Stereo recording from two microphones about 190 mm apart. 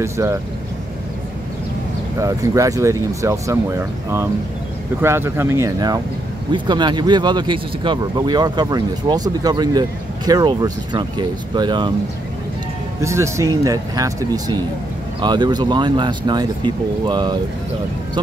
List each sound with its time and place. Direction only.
0.0 s speech: 15° right (ahead or behind)
2.1 s speech: 15° right (ahead or behind)
5.0 s speech: 15° right (ahead or behind)
13.0 s speech: 15° right (ahead or behind)